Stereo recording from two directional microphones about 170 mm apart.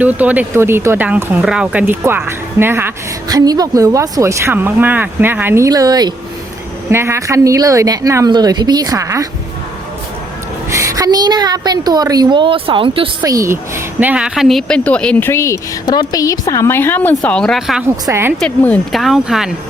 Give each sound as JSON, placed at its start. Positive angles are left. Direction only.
{"t": 0.0, "sound": "a woman's voice", "side_deg": -10}
{"t": 10.7, "sound": "a woman's voice", "side_deg": -15}
{"t": 13.2, "sound": "a woman's voice", "side_deg": -20}
{"t": 18.0, "sound": "speech", "side_deg": -15}
{"t": 18.3, "sound": "speech", "side_deg": 5}